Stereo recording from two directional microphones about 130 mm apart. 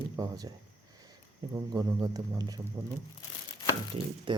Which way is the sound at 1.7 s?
30° right (ahead or behind).